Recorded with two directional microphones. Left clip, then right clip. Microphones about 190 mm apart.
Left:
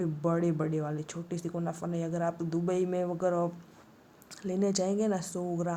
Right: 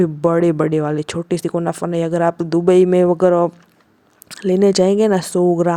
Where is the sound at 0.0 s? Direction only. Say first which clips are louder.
Right 15 dB; 50° right (ahead or behind).